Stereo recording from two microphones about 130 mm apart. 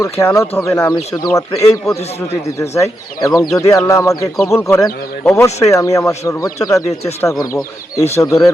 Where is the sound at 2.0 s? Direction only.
55° left (ahead or behind).